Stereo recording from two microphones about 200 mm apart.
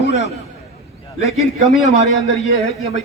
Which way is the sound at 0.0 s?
65° left (ahead or behind).